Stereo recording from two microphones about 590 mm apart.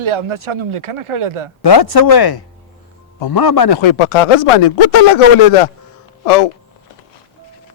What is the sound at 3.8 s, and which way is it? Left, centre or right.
Speech, left.